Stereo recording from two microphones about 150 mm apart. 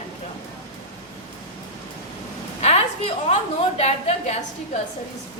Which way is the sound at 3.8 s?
45° left (ahead or behind).